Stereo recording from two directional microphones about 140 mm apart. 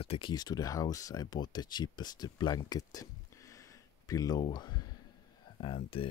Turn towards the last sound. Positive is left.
turn(degrees=40)  # may be behind; listen again after turning